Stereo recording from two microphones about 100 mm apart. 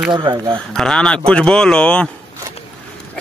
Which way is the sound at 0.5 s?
5° left (ahead or behind).